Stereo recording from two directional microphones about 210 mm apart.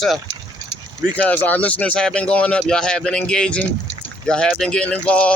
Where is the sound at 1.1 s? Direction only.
5° left (ahead or behind).